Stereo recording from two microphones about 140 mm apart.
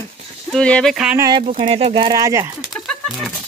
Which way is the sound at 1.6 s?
40° right (ahead or behind).